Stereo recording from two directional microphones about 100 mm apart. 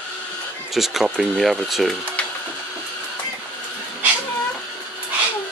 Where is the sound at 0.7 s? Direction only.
5° right (ahead or behind).